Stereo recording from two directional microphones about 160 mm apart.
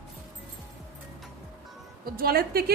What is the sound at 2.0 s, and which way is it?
Speech, 70° right (ahead or behind).